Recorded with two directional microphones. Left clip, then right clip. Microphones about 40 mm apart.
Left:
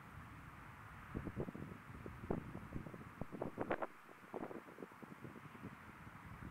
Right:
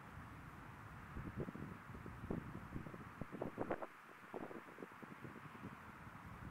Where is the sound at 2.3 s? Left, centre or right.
Left.